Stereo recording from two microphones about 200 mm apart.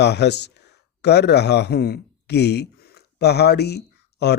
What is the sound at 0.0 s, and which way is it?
Speech, 55° left (ahead or behind).